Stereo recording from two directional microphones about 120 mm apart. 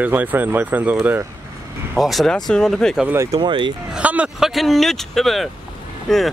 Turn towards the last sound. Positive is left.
turn(degrees=5)  # may be behind; listen again after turning